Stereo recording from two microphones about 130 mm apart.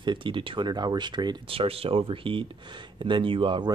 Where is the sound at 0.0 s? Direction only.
40° right (ahead or behind).